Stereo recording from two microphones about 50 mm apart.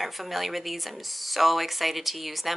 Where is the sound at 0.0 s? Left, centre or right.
Centre.